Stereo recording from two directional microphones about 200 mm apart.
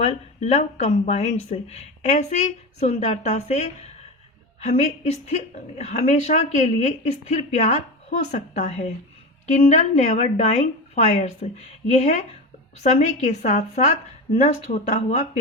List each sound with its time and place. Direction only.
0.0 s a woman's voice: 30° left (ahead or behind)